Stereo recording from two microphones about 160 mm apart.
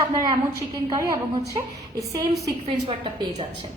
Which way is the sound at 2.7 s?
35° right (ahead or behind).